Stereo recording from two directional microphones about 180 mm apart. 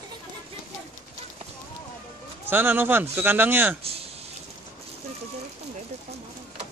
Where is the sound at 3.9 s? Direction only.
35° right (ahead or behind).